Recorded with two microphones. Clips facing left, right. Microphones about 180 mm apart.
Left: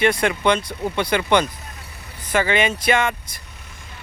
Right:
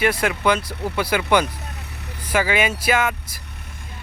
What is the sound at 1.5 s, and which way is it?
Vehicle, 70° right (ahead or behind).